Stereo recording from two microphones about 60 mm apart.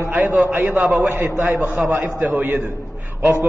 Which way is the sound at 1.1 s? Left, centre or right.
Right.